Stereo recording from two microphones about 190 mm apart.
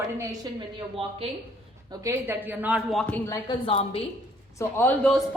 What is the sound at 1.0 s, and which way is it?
Speech, 30° right (ahead or behind).